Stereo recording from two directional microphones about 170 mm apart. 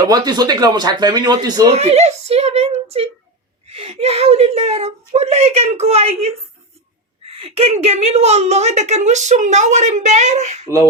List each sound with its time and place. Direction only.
0.0 s speech: 25° right (ahead or behind)
1.7 s a woman's voice: 40° right (ahead or behind)